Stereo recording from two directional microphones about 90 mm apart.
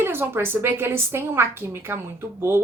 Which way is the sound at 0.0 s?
25° right (ahead or behind).